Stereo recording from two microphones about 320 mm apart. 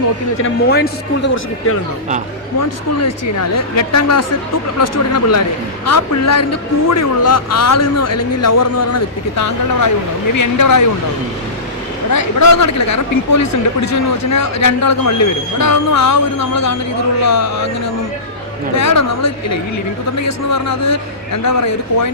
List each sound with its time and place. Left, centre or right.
0.4 s a man's voice: left
2.6 s a man's voice: left
12.1 s speech: left
18.8 s speech: left